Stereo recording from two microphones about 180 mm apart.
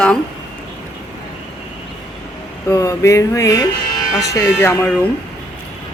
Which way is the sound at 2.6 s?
15° left (ahead or behind).